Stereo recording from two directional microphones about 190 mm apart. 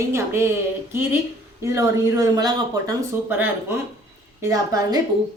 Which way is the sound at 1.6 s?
15° right (ahead or behind).